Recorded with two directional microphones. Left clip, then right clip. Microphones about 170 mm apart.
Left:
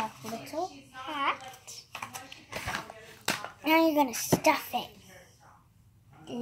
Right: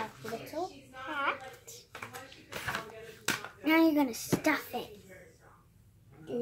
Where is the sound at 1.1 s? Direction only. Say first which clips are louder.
Left 2 dB; centre (ahead or behind).